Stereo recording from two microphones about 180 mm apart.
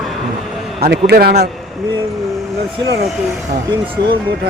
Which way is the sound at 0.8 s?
60° right (ahead or behind).